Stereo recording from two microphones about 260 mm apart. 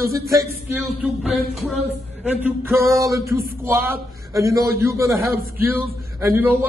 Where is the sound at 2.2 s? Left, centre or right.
Centre.